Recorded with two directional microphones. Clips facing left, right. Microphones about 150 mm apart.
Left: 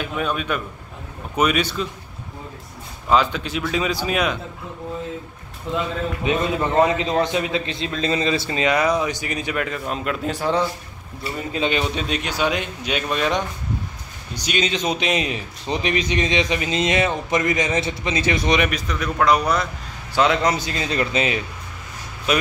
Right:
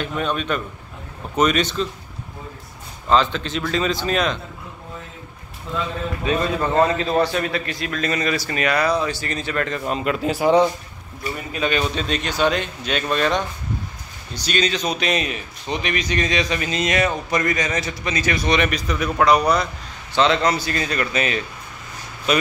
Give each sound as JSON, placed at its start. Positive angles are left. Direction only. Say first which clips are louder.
{"t": 0.0, "sound": "a man's voice", "louder": "right 1 dB", "side_deg": 5}
{"t": 3.1, "sound": "a man's voice", "louder": "even", "side_deg": 10}
{"t": 5.7, "sound": "a man's voice", "louder": "left 2 dB", "side_deg": 20}
{"t": 10.4, "sound": "speech", "louder": "right 6 dB", "side_deg": -15}
{"t": 11.5, "sound": "a man's voice", "louder": "even", "side_deg": 20}
{"t": 18.7, "sound": "a man's voice", "louder": "right 2 dB", "side_deg": 0}
{"t": 22.3, "sound": "a man's voice", "louder": "right 1 dB", "side_deg": 5}